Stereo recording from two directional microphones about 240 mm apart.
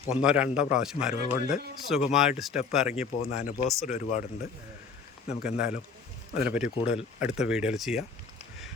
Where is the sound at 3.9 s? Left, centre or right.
Left.